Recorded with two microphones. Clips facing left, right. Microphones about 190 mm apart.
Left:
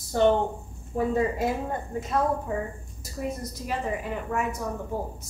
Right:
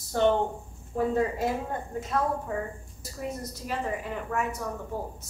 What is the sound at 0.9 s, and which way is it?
Speech, 10° left (ahead or behind).